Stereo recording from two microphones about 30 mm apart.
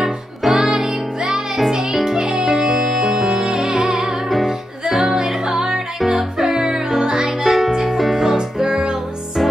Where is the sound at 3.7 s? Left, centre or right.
Right.